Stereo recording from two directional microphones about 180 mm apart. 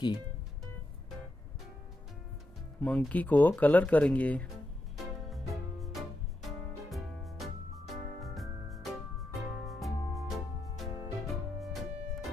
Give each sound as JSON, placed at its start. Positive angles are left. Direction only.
{"t": 2.8, "sound": "speech", "side_deg": 5}
{"t": 4.9, "sound": "music", "side_deg": 0}